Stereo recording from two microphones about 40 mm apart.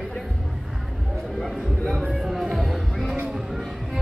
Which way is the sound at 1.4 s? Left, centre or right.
Centre.